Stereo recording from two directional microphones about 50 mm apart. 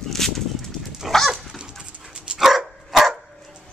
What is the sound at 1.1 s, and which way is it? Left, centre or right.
Dog, centre.